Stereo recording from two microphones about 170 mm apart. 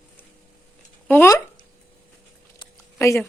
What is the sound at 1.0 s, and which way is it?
Speech, 15° left (ahead or behind).